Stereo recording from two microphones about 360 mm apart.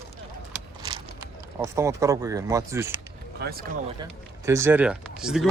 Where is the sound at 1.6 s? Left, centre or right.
Centre.